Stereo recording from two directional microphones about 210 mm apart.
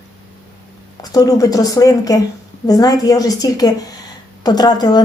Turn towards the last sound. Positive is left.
turn(degrees=20)  # may be behind; listen again after turning